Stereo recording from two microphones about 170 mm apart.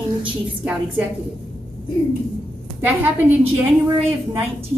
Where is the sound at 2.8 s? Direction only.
10° right (ahead or behind).